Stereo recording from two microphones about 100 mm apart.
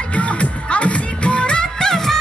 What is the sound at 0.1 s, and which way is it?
Music, 15° left (ahead or behind).